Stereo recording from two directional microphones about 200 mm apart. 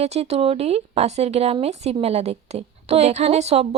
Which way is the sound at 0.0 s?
30° right (ahead or behind).